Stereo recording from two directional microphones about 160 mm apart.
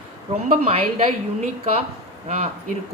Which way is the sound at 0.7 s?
40° right (ahead or behind).